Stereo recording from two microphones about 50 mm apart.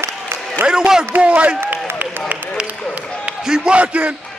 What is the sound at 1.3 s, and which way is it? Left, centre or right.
Speech, right.